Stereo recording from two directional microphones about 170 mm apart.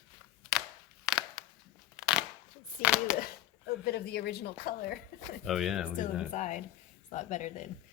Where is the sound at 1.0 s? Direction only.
Centre (ahead or behind).